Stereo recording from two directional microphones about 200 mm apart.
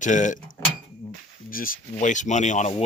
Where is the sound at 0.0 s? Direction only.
40° left (ahead or behind).